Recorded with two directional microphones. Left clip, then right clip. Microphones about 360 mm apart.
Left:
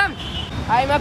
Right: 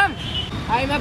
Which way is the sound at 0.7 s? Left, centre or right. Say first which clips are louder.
Left 4 dB; centre.